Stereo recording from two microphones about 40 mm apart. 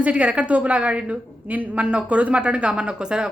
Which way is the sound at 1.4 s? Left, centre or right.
Right.